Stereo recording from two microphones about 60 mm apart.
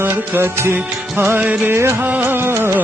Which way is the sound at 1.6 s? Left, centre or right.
Right.